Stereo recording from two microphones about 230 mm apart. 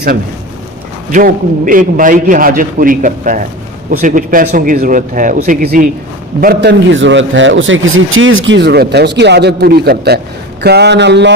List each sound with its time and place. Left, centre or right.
1.1 s a man's voice: right